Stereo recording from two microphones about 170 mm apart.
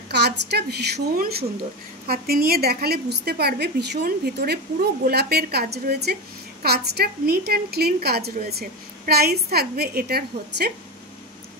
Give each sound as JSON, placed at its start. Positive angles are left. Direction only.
{"t": 0.1, "sound": "a woman's voice", "side_deg": -75}